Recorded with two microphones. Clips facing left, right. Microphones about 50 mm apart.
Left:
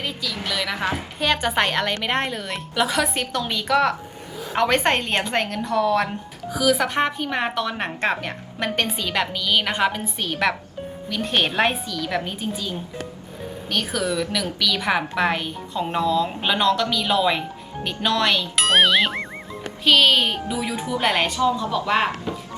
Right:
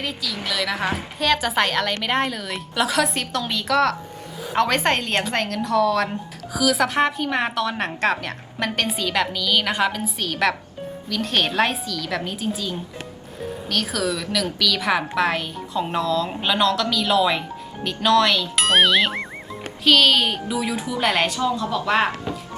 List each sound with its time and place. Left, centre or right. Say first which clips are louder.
0.0 s a woman's voice: even; centre
13.9 s a woman's voice: left 1 dB; centre